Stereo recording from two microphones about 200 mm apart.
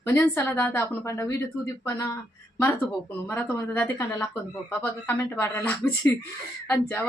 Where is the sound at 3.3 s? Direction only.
10° left (ahead or behind).